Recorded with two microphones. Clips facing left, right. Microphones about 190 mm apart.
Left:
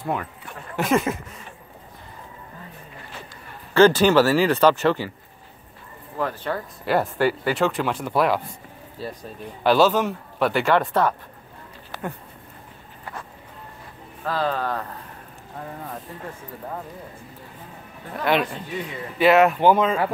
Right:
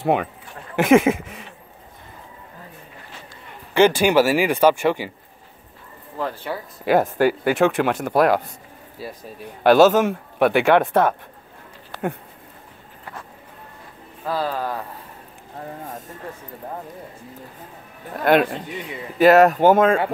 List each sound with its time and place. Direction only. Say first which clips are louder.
0.0 s speech: right 7 dB; 75° right (ahead or behind)
0.7 s speech: right 7 dB; 90° right
3.7 s speech: even; 15° right (ahead or behind)
6.5 s speech: left 1 dB; 10° right (ahead or behind)
6.9 s speech: right 4 dB; 45° right (ahead or behind)
8.1 s speech: right 3 dB; 45° right (ahead or behind)
9.0 s speech: left 1 dB; 10° right (ahead or behind)
9.6 s speech: right 5 dB; 50° right (ahead or behind)
14.2 s speech: even; 10° right (ahead or behind)
15.8 s speech: even; 45° right (ahead or behind)
18.2 s speech: right 5 dB; 50° right (ahead or behind)